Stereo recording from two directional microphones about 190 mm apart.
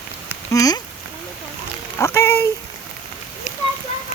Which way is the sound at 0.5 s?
20° left (ahead or behind).